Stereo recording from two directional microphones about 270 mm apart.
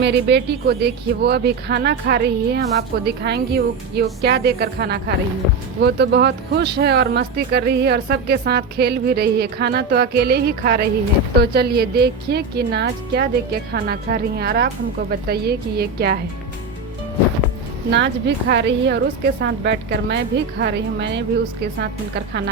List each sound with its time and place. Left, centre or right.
0.0 s a woman's voice: right
17.9 s a woman's voice: right